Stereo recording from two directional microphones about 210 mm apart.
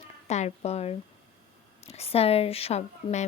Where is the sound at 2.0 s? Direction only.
30° left (ahead or behind).